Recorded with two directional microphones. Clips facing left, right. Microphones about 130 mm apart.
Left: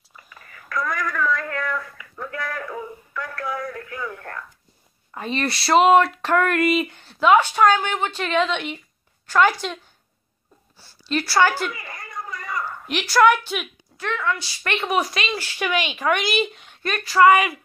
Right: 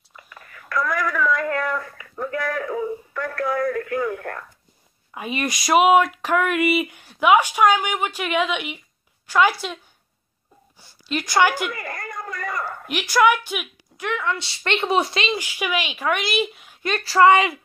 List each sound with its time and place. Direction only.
0.1 s whispering: centre (ahead or behind)
1.5 s a sound: 40° right (ahead or behind); by 4.5 s 60° right (ahead or behind)
5.1 s speech: 10° right (ahead or behind)
10.8 s a woman's voice: 15° right (ahead or behind)
11.7 s a sound: 60° right (ahead or behind)
12.8 s a woman's voice: 10° right (ahead or behind); by 15.3 s 25° right (ahead or behind)
15.3 s speech: 10° right (ahead or behind)
16.8 s a woman's voice: 30° right (ahead or behind)